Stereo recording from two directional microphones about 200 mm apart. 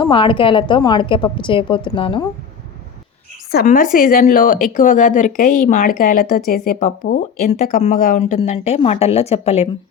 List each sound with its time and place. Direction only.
0.0 s a woman's voice: 25° left (ahead or behind)
3.5 s a woman's voice: 45° left (ahead or behind); by 9.6 s 30° left (ahead or behind)